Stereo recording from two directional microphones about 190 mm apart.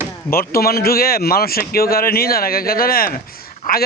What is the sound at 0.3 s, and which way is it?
A man's voice, 50° left (ahead or behind).